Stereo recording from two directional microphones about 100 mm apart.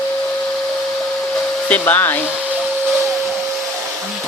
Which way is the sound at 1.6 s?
15° left (ahead or behind).